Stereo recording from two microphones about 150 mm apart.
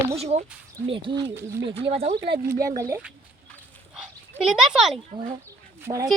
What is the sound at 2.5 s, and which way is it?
Speech, 20° right (ahead or behind).